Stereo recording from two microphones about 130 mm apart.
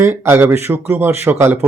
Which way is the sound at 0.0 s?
20° right (ahead or behind).